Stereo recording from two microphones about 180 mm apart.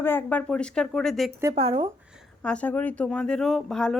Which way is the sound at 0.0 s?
10° left (ahead or behind).